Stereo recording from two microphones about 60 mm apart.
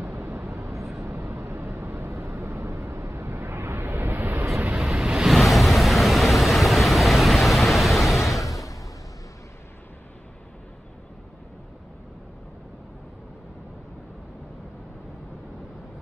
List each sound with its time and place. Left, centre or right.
0.2 s vehicle: right
0.8 s vehicle: centre
1.2 s vehicle: right
4.7 s waves: centre
5.0 s a sound: centre
5.3 s vehicle: centre